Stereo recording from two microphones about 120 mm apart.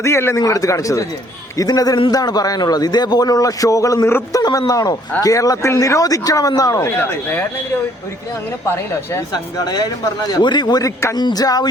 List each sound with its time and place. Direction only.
0.0 s a man's voice: 20° left (ahead or behind)
7.0 s speech: 15° left (ahead or behind)
9.3 s a man's voice: 35° left (ahead or behind)